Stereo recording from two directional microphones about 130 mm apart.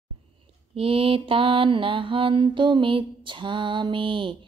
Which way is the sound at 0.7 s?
45° right (ahead or behind).